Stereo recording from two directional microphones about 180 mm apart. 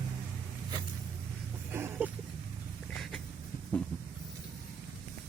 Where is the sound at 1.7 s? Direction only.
10° right (ahead or behind).